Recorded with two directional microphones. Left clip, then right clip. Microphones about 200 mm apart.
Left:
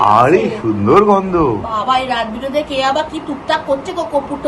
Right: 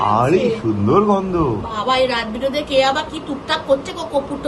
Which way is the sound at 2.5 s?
25° left (ahead or behind).